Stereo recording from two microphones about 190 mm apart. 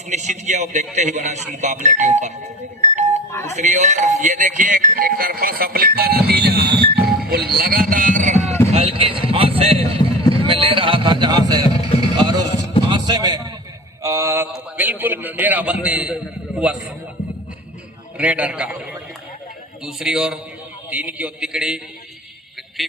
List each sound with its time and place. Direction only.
0.1 s speech: 40° right (ahead or behind)
3.4 s speech: 40° right (ahead or behind)
8.7 s basketball bounce: 30° right (ahead or behind)
10.3 s a sound: 30° right (ahead or behind)
14.5 s a man's voice: 10° right (ahead or behind)
18.2 s a man's voice: 5° right (ahead or behind)
19.8 s a man's voice: 5° right (ahead or behind)
22.8 s a man's voice: centre (ahead or behind)